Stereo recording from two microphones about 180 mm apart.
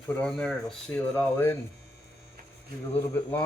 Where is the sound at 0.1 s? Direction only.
5° left (ahead or behind).